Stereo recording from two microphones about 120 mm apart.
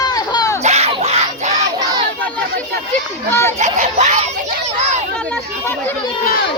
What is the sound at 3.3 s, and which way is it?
Speech, 25° left (ahead or behind).